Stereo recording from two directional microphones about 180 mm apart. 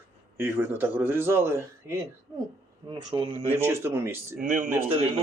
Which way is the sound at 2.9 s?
30° right (ahead or behind).